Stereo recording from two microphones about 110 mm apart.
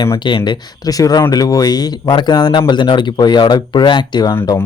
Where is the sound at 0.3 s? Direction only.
45° left (ahead or behind).